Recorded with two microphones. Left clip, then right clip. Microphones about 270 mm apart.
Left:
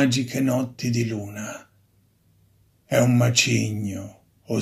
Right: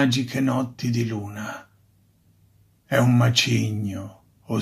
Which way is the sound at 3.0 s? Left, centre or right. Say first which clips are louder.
Left 1 dB; centre.